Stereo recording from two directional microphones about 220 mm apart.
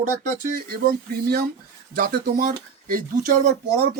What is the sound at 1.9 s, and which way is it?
Speech, 40° right (ahead or behind).